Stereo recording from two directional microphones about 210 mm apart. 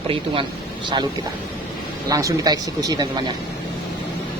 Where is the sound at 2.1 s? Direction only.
15° right (ahead or behind).